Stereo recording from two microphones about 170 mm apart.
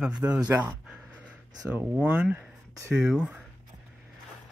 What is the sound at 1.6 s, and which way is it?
Speech, 10° right (ahead or behind).